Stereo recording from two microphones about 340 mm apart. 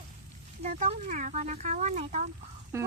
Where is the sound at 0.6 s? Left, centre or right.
Centre.